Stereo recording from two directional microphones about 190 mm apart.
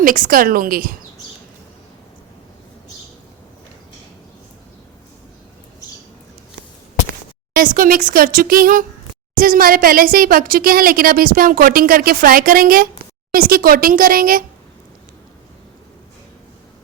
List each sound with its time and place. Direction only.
0.0 s a woman's voice: 45° right (ahead or behind)
7.5 s a woman's voice: 45° right (ahead or behind)